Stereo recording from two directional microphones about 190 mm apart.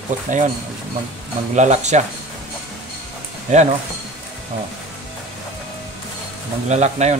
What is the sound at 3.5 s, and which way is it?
Speech, 40° right (ahead or behind).